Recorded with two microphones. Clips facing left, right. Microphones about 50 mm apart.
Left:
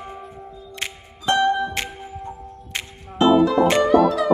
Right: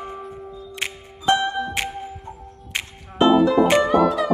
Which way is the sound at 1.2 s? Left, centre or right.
Centre.